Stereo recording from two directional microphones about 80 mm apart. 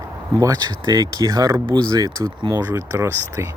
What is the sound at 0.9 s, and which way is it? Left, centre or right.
Speech, right.